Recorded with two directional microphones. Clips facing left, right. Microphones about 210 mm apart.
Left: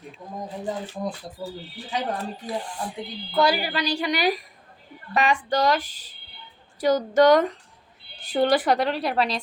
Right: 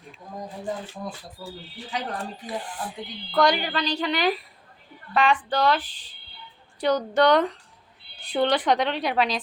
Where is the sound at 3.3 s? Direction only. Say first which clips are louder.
Even; 5° left (ahead or behind).